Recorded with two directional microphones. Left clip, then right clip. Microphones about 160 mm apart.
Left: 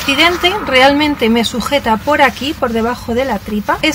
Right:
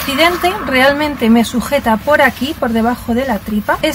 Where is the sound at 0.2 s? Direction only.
15° left (ahead or behind).